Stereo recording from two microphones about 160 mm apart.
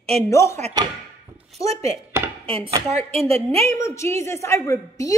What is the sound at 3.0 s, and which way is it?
Speech, 40° right (ahead or behind).